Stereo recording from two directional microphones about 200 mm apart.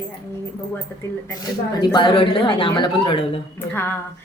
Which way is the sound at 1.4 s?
20° left (ahead or behind).